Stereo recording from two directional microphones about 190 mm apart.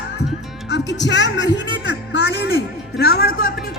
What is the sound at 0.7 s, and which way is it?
Speech, 65° left (ahead or behind).